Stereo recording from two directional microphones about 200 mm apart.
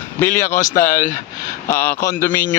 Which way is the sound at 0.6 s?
45° left (ahead or behind).